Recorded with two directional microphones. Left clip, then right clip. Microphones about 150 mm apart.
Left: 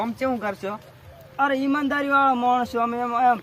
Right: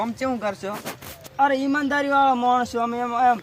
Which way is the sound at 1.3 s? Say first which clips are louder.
Right 2 dB; 15° left (ahead or behind).